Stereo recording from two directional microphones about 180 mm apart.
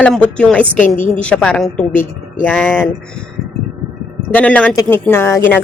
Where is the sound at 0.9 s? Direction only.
40° left (ahead or behind).